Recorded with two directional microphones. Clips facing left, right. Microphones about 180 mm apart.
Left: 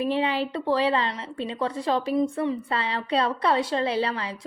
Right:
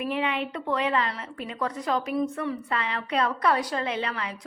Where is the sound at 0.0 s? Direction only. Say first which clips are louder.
Left 3 dB; 30° left (ahead or behind).